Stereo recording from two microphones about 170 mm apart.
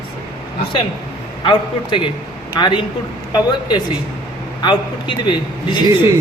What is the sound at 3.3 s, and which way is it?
A man's voice, 25° left (ahead or behind).